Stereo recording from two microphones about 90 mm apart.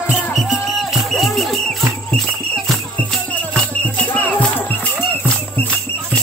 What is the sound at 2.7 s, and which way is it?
Music, 5° left (ahead or behind).